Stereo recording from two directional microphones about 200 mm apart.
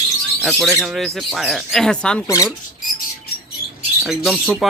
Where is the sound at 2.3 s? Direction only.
15° left (ahead or behind).